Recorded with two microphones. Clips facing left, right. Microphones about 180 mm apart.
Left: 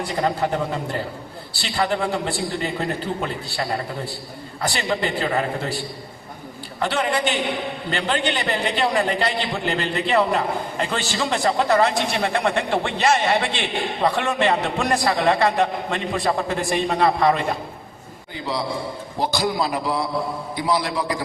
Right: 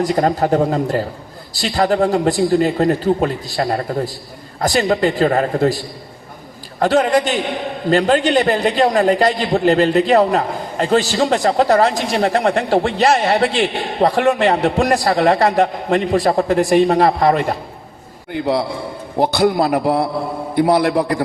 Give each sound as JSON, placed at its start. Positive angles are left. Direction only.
{"t": 0.0, "sound": "a man's voice", "side_deg": -40}
{"t": 18.3, "sound": "a man's voice", "side_deg": -60}